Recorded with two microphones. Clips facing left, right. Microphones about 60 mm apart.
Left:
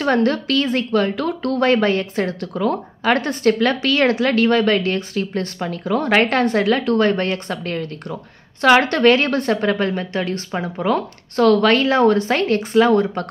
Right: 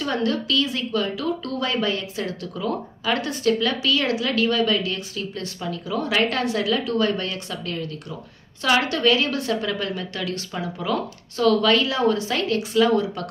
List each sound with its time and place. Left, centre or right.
0.0 s a woman's voice: left